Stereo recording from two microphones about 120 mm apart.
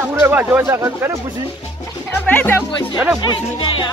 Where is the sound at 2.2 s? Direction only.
15° left (ahead or behind).